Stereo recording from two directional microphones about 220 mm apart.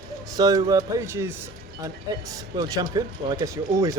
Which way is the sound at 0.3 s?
15° right (ahead or behind).